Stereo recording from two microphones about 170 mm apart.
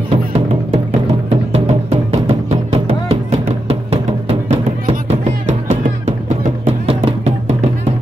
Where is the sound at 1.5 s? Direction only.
40° right (ahead or behind).